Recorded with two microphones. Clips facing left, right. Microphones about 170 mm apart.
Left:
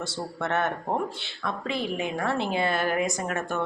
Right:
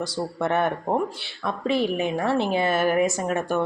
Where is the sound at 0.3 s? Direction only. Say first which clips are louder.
Right 4 dB; 15° right (ahead or behind).